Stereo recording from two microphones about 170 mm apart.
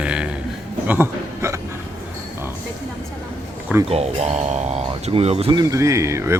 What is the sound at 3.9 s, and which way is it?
Speech, 40° right (ahead or behind).